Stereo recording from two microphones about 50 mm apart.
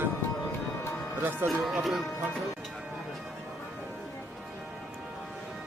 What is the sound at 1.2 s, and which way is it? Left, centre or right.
Speech, right.